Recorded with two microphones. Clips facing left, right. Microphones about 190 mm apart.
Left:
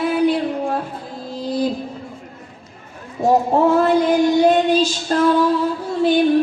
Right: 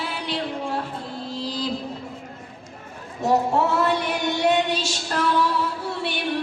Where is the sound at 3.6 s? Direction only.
70° right (ahead or behind).